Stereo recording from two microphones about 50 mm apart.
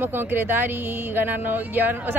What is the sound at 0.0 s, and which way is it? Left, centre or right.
Speech, right.